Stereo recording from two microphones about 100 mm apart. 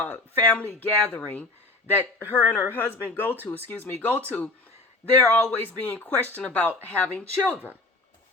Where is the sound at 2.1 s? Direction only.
20° left (ahead or behind).